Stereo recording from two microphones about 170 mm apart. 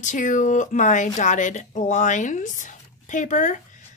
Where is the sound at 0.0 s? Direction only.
50° left (ahead or behind).